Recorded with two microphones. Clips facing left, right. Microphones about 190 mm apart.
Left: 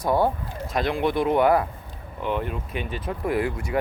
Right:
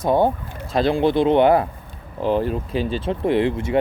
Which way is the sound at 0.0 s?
25° right (ahead or behind).